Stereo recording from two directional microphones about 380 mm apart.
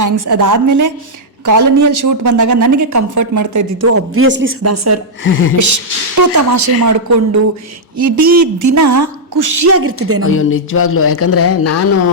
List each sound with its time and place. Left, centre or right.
0.0 s a woman's voice: right
4.6 s a woman's voice: right
5.2 s speech: left
5.5 s a woman's voice: right
10.2 s speech: left